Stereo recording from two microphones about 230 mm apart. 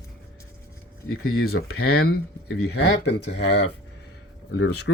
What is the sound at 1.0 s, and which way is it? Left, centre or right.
Speech, left.